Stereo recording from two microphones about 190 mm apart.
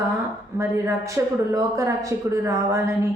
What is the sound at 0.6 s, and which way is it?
A woman's voice, 15° right (ahead or behind).